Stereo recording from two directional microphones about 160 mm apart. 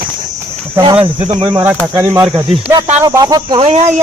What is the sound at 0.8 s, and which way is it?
Speech, 35° right (ahead or behind).